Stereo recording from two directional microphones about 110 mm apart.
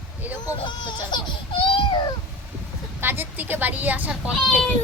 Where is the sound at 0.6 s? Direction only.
45° left (ahead or behind).